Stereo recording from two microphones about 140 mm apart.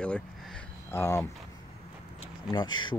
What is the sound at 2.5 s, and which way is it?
Speech, 30° left (ahead or behind).